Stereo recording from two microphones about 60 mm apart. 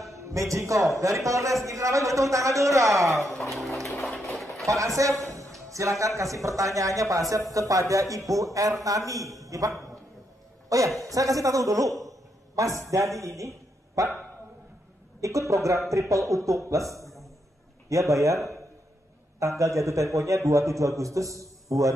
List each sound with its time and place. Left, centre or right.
0.1 s a man's voice: right
3.4 s speech: centre
4.0 s a sound: centre
4.6 s a man's voice: right
5.2 s music: right
5.7 s a man's voice: right
11.0 s a man's voice: right
15.1 s a man's voice: right
19.6 s a man's voice: right